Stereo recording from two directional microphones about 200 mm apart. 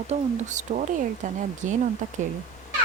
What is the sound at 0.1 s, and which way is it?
Speech, 35° right (ahead or behind).